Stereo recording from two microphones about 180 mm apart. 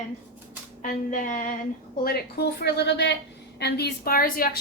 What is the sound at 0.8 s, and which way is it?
Speech, 45° left (ahead or behind).